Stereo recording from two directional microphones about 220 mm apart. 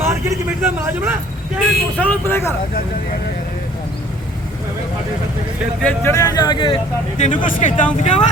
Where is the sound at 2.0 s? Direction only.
10° left (ahead or behind).